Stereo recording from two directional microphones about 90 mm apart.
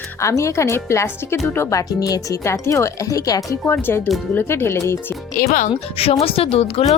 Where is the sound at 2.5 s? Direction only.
30° left (ahead or behind).